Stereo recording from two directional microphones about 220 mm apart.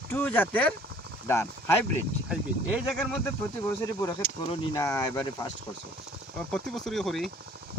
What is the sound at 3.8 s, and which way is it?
Speech, 15° left (ahead or behind).